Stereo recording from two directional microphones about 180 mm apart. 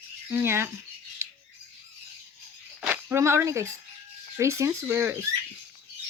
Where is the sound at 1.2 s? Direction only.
15° right (ahead or behind).